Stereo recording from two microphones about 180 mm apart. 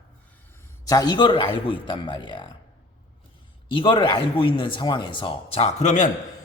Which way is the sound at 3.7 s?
30° left (ahead or behind).